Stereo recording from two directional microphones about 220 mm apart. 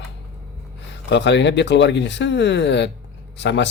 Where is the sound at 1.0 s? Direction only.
50° left (ahead or behind).